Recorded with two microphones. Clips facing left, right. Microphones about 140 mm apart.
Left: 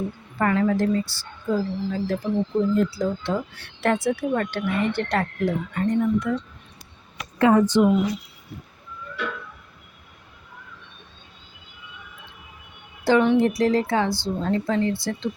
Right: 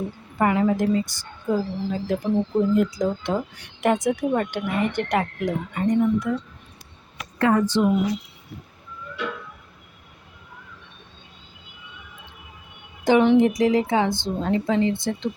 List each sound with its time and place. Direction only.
0.3 s a woman's voice: 15° right (ahead or behind)
7.3 s speech: 15° left (ahead or behind)
13.1 s a woman's voice: 20° right (ahead or behind)